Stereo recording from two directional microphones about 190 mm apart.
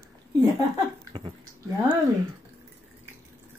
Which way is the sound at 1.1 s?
30° right (ahead or behind).